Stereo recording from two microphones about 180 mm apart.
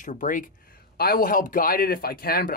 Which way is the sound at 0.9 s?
55° left (ahead or behind).